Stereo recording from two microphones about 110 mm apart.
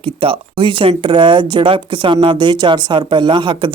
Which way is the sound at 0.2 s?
50° right (ahead or behind).